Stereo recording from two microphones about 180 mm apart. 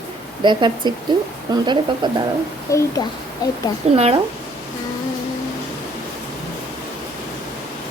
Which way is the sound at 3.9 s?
35° right (ahead or behind).